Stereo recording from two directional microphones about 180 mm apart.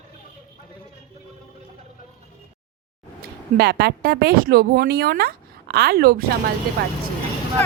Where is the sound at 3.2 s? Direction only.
60° right (ahead or behind).